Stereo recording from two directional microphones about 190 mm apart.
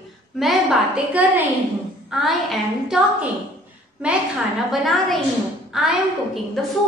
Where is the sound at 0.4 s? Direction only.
Centre (ahead or behind).